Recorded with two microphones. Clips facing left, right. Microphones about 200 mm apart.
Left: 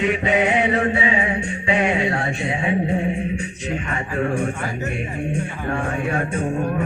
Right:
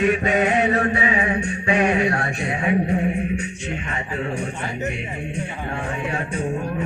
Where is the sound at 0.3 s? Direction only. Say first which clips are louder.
Even; 25° left (ahead or behind).